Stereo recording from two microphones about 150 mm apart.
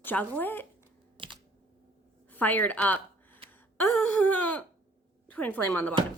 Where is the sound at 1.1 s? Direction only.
35° right (ahead or behind).